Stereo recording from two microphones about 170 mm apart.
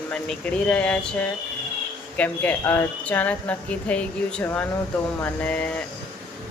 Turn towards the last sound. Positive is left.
turn(degrees=5)  # may be behind; listen again after turning